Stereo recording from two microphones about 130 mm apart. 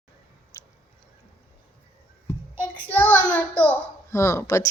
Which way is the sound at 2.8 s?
10° left (ahead or behind).